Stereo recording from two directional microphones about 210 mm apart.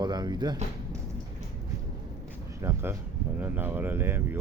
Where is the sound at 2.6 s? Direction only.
10° right (ahead or behind).